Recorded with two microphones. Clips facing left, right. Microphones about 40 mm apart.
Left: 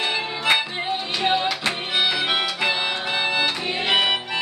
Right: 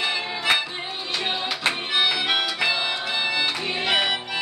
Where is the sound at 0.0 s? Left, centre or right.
Left.